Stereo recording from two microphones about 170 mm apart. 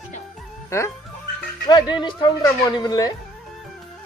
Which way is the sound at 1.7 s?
25° left (ahead or behind).